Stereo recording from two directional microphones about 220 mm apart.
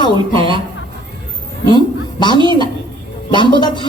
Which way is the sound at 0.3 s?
20° right (ahead or behind).